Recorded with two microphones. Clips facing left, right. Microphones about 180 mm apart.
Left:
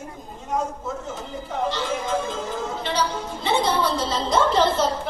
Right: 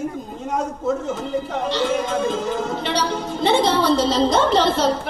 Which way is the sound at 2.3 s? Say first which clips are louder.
Right 5 dB; 70° right (ahead or behind).